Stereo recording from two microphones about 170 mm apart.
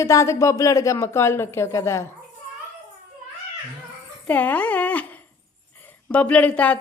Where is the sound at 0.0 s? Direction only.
15° left (ahead or behind).